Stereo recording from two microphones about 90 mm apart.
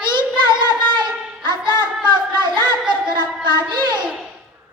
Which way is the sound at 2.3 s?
60° right (ahead or behind).